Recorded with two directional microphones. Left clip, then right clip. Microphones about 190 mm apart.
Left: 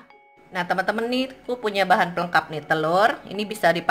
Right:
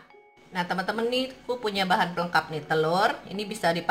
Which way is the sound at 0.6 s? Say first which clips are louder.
Left 5 dB; 50° left (ahead or behind).